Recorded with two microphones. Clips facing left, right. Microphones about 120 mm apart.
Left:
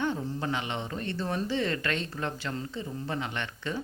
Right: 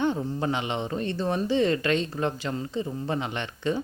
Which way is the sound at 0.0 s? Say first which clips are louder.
Right 5 dB; 20° right (ahead or behind).